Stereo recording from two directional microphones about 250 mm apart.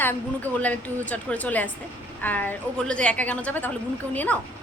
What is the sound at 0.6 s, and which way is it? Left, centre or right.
A woman's voice, centre.